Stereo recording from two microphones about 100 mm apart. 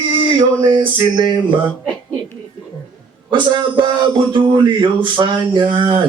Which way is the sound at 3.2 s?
50° right (ahead or behind).